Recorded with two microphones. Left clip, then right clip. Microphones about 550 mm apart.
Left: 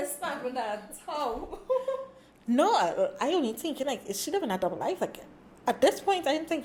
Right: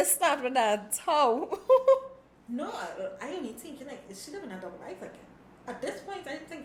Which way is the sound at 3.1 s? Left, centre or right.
Left.